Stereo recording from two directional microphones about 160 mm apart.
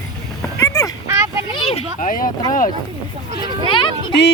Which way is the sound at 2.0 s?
55° left (ahead or behind).